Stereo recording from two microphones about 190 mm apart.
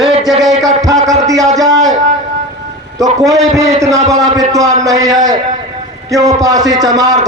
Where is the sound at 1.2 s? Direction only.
20° right (ahead or behind).